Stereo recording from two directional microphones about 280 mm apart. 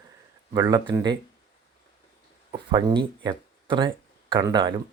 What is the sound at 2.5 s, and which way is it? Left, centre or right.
Speech, centre.